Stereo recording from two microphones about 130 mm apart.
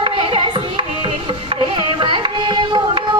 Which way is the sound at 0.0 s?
40° right (ahead or behind).